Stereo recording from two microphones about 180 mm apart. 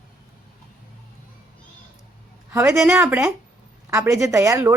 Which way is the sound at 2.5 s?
15° right (ahead or behind).